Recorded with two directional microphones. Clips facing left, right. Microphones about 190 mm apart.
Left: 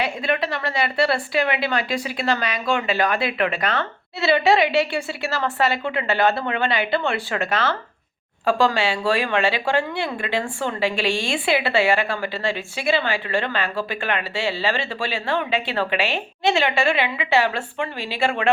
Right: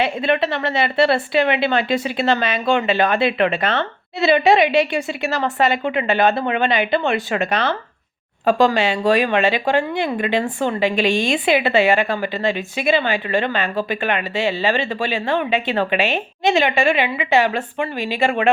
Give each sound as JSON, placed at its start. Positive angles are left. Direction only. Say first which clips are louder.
{"t": 0.0, "sound": "a woman's voice", "louder": "right 5 dB", "side_deg": -25}